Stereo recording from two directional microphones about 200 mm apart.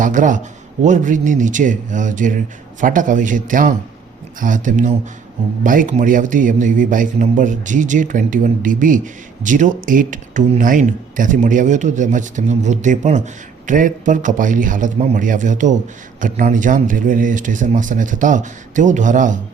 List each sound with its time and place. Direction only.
0.0 s speech: 40° right (ahead or behind)